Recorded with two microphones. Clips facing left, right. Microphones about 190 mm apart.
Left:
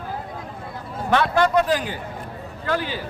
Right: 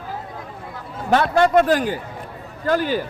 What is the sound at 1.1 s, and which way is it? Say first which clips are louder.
A man's voice: right 3 dB; 45° right (ahead or behind).